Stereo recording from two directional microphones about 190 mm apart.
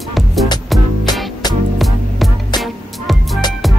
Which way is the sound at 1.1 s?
20° left (ahead or behind).